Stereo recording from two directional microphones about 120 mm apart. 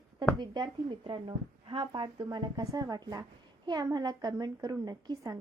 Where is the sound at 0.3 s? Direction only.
35° right (ahead or behind).